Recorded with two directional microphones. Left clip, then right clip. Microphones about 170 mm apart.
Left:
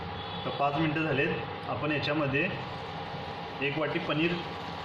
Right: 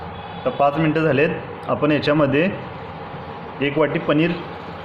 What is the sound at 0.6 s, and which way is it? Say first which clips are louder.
Speech: right 11 dB; 55° right (ahead or behind).